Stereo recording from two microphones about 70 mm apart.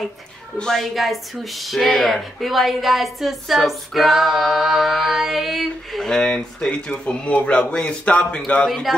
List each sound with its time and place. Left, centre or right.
0.6 s a man's voice: centre
8.6 s speech: centre